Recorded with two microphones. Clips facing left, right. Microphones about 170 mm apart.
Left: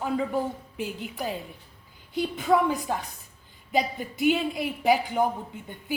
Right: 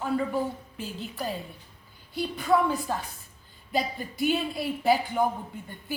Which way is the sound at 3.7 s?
20° left (ahead or behind).